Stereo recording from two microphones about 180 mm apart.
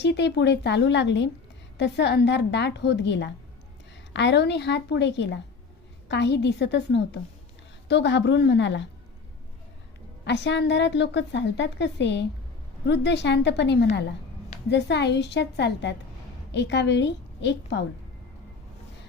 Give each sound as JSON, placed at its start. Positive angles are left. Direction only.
{"t": 0.0, "sound": "a woman's voice", "side_deg": 75}
{"t": 10.2, "sound": "a woman's voice", "side_deg": 75}